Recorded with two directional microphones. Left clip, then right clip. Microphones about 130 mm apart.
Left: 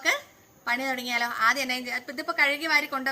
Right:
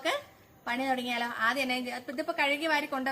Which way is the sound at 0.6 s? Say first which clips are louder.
Left 3 dB; 5° right (ahead or behind).